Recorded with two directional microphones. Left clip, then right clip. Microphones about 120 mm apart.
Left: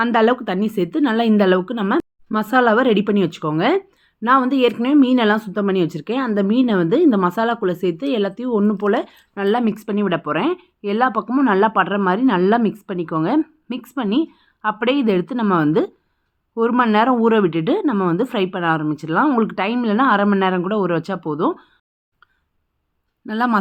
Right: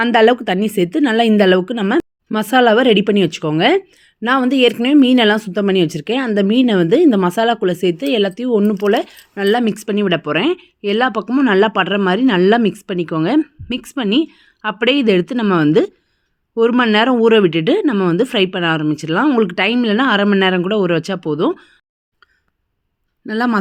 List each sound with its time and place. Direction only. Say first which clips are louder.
0.0 s a woman's voice: right 4 dB; 45° right (ahead or behind)
23.2 s speech: right 1 dB; 15° right (ahead or behind)